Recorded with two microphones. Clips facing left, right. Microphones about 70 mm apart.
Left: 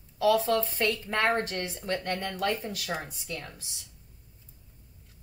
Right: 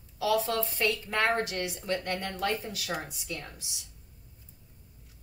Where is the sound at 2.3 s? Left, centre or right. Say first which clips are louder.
Left 1 dB; right.